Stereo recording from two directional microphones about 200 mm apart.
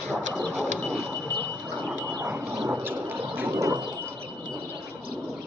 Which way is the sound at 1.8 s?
10° right (ahead or behind).